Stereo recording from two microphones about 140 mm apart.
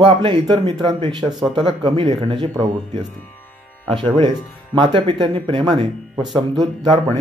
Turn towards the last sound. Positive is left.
turn(degrees=-30)  # may be behind; listen again after turning